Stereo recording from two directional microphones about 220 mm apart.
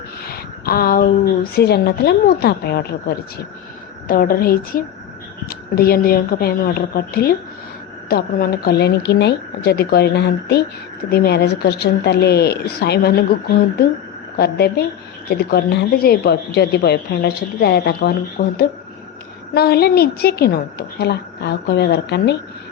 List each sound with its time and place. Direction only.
0.3 s a sound: 45° left (ahead or behind)
1.5 s a woman's voice: 45° left (ahead or behind)
14.3 s a woman's voice: 45° left (ahead or behind)
19.5 s a woman's voice: 45° left (ahead or behind)